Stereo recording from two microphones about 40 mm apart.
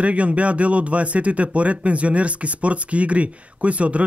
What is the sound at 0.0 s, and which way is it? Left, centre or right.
Speech, right.